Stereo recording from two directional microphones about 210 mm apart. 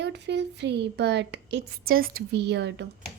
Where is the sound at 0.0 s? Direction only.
55° right (ahead or behind).